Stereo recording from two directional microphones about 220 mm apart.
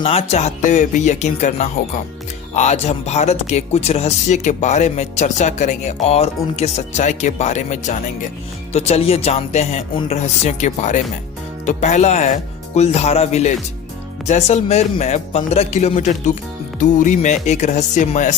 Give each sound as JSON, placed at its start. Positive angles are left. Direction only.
{"t": 0.0, "sound": "speech", "side_deg": 25}